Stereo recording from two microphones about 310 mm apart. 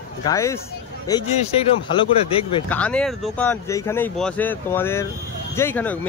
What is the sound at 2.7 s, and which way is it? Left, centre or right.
Speech, centre.